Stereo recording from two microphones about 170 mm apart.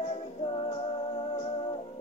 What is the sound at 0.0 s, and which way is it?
Music, 35° left (ahead or behind).